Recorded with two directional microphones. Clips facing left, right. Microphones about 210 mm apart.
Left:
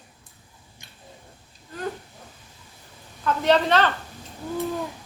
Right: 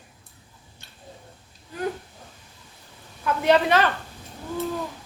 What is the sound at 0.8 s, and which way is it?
Tick-tock, 15° left (ahead or behind).